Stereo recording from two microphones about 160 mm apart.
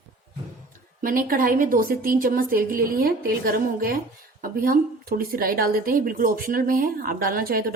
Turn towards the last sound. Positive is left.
turn(degrees=-65)  # may be behind; listen again after turning